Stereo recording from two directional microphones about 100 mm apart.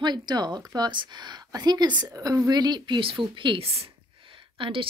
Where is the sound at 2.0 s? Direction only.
35° right (ahead or behind); by 3.9 s 75° right (ahead or behind).